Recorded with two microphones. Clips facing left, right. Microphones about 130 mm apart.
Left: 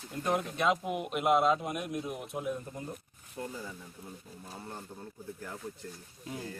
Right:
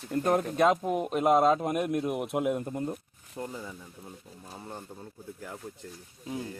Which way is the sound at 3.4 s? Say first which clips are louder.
Right 2 dB; 30° right (ahead or behind).